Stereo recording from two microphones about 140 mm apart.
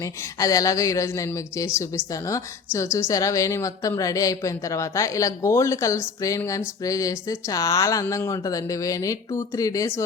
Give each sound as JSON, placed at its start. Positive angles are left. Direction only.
{"t": 0.0, "sound": "a woman's voice", "side_deg": 25}